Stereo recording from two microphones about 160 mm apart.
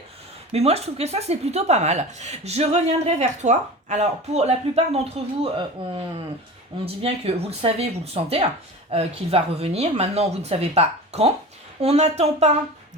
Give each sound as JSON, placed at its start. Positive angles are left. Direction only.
{"t": 0.5, "sound": "speech", "side_deg": -40}
{"t": 6.8, "sound": "speech", "side_deg": -40}